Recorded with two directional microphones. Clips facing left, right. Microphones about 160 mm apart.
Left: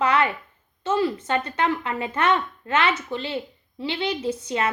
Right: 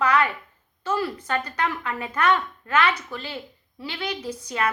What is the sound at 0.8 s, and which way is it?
Speech, 25° left (ahead or behind).